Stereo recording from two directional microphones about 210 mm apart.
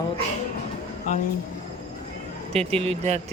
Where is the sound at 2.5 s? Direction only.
30° right (ahead or behind).